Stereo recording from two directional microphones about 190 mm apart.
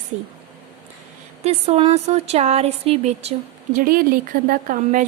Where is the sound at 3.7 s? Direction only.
50° right (ahead or behind).